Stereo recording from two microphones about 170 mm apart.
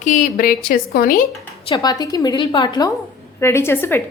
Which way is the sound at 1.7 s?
25° left (ahead or behind).